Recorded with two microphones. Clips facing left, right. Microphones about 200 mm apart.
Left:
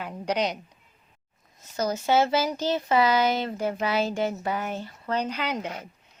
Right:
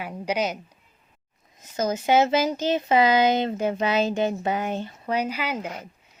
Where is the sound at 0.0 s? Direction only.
5° right (ahead or behind).